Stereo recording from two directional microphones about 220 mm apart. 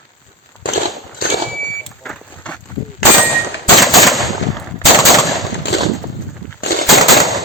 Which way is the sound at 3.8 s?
Centre (ahead or behind).